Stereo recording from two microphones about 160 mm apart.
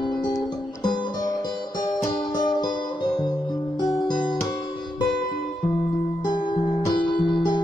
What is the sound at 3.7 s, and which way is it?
Music, 25° left (ahead or behind).